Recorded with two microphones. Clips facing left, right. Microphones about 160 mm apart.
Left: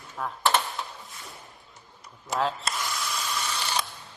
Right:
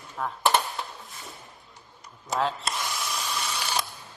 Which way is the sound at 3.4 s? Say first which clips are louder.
Even; 10° right (ahead or behind).